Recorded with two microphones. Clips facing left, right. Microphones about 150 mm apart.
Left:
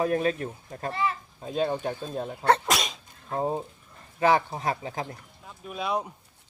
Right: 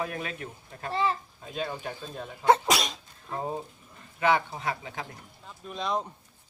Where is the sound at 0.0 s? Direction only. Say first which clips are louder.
Left 9 dB; 35° left (ahead or behind).